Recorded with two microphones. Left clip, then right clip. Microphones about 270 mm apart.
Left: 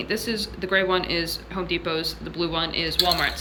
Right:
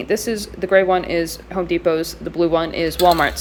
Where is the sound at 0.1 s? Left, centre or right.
Centre.